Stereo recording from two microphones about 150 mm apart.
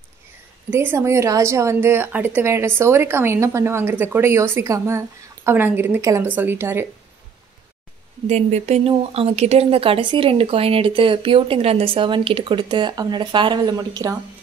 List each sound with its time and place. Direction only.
0.7 s a woman's voice: 15° right (ahead or behind)
8.3 s speech: 50° right (ahead or behind); by 14.1 s 25° right (ahead or behind)